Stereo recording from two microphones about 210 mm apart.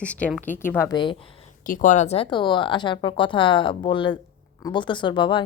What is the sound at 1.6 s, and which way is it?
A woman's voice, 40° left (ahead or behind).